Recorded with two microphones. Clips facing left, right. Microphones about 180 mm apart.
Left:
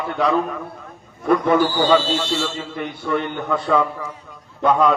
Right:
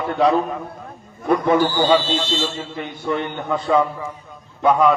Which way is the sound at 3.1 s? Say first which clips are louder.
Even; 20° right (ahead or behind).